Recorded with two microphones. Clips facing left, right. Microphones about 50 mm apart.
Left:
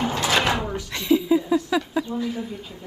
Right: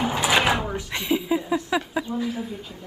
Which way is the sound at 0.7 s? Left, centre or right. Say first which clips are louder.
Left 4 dB; right.